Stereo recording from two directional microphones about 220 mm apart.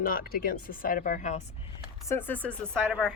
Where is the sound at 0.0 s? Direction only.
40° left (ahead or behind).